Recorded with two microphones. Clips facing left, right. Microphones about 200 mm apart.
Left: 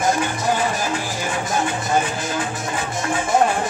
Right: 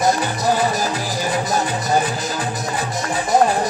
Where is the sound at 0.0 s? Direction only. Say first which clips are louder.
Right 2 dB; 35° right (ahead or behind).